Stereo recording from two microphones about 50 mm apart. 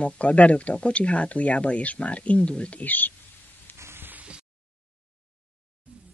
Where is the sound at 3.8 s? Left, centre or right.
Right.